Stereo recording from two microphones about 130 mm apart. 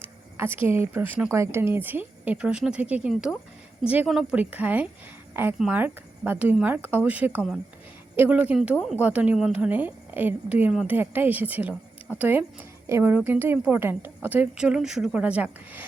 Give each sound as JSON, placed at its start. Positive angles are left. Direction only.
{"t": 0.3, "sound": "a woman's voice", "side_deg": -15}